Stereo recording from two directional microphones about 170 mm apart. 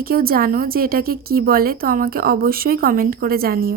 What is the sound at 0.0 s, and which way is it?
A woman's voice, 60° right (ahead or behind).